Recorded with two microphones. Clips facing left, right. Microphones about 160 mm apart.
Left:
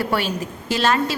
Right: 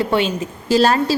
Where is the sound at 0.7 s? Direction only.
35° right (ahead or behind).